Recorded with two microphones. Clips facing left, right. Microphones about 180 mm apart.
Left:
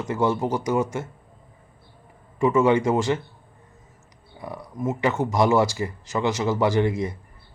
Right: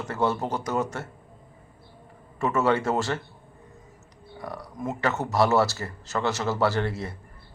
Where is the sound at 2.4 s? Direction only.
15° left (ahead or behind).